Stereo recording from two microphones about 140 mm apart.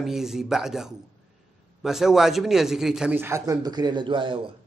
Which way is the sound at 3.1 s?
15° right (ahead or behind).